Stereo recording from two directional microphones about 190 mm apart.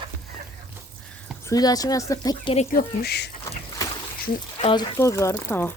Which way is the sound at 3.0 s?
60° left (ahead or behind).